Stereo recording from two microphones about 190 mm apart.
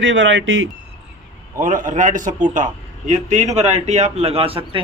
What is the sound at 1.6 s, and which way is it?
A man's voice, 45° right (ahead or behind).